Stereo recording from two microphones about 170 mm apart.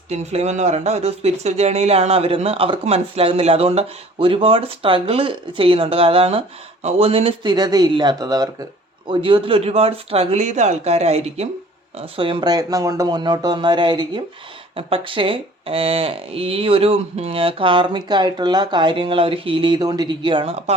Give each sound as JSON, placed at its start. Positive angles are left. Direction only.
{"t": 0.1, "sound": "speech", "side_deg": -40}